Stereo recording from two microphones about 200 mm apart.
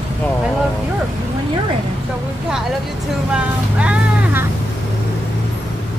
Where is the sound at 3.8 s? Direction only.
5° right (ahead or behind).